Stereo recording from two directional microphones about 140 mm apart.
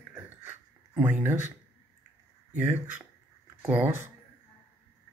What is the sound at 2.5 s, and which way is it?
Speech, 15° right (ahead or behind).